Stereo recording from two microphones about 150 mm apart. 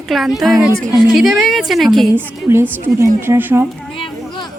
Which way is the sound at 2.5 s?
15° right (ahead or behind).